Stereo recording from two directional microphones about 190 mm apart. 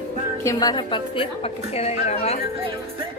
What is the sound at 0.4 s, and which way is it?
A woman's voice, 20° left (ahead or behind).